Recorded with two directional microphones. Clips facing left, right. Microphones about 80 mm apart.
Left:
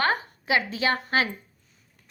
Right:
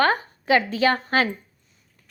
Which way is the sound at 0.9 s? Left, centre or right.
Right.